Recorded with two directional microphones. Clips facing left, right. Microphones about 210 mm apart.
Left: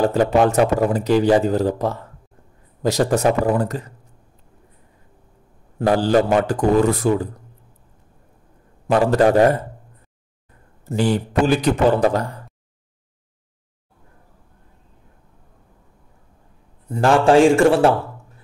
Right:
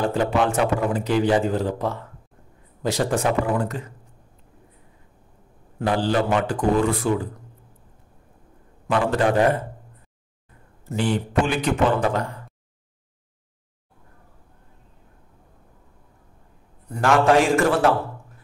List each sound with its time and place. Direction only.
0.1 s a man's voice: 40° left (ahead or behind)
5.8 s a man's voice: 40° left (ahead or behind)
8.8 s a man's voice: 40° left (ahead or behind)
10.9 s a man's voice: 40° left (ahead or behind)
16.9 s a man's voice: 30° left (ahead or behind)